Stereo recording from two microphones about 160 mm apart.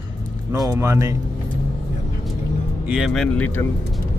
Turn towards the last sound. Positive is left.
turn(degrees=10)  # may be behind; listen again after turning